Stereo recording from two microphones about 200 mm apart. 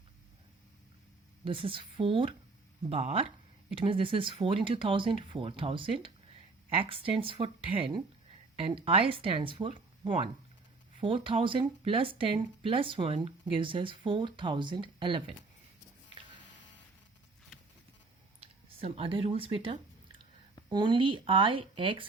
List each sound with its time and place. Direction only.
1.5 s speech: 25° right (ahead or behind)
18.3 s a sound: 30° right (ahead or behind)
20.7 s speech: 25° right (ahead or behind)